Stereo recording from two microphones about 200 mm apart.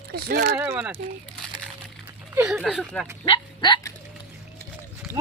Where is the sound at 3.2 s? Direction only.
25° left (ahead or behind).